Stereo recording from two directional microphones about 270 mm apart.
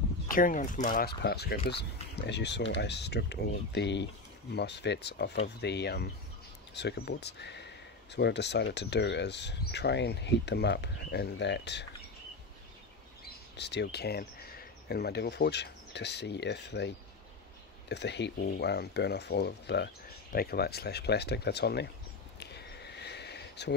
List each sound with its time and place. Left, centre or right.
0.3 s speech: left
13.6 s speech: left
22.4 s a sound: left